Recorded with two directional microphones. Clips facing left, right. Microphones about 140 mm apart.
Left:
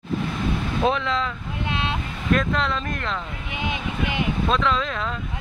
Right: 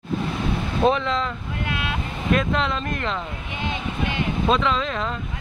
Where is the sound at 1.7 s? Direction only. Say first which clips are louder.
Left 2 dB; 25° left (ahead or behind).